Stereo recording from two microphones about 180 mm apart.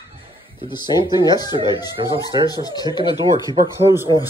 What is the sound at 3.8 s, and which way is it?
Speech, 15° right (ahead or behind).